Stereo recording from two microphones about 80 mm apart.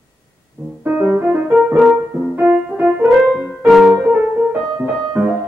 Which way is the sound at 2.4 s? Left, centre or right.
Centre.